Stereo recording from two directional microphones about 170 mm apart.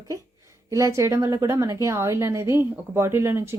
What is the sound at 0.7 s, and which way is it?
Speech, 20° right (ahead or behind).